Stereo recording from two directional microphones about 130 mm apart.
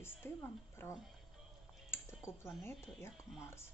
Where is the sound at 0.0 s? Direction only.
20° left (ahead or behind).